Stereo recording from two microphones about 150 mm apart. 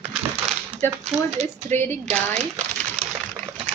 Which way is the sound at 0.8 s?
15° left (ahead or behind).